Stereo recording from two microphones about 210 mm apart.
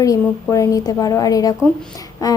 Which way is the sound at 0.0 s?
15° left (ahead or behind).